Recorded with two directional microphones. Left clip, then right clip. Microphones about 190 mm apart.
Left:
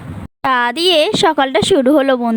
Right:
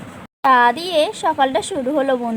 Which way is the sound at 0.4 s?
50° left (ahead or behind).